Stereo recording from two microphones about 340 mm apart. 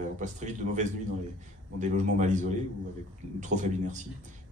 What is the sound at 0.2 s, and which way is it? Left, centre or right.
A man's voice, right.